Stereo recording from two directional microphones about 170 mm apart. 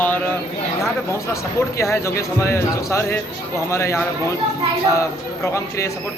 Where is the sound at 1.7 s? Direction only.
15° left (ahead or behind).